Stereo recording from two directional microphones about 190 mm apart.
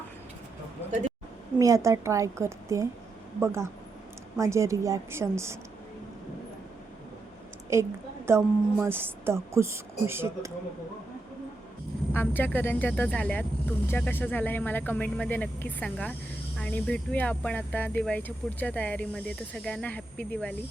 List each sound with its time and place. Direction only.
0.9 s a sound: 40° right (ahead or behind)
1.5 s a woman's voice: 15° right (ahead or behind)
7.7 s a woman's voice: 15° right (ahead or behind)
12.1 s speech: 10° left (ahead or behind)